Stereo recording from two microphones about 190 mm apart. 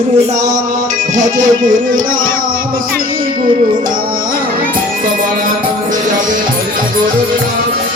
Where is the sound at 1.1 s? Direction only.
40° right (ahead or behind).